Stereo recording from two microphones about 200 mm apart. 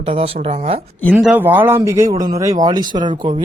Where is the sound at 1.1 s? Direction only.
5° right (ahead or behind).